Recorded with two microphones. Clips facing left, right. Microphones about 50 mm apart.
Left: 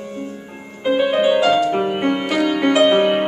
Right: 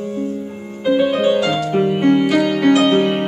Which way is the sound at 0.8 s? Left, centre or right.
Centre.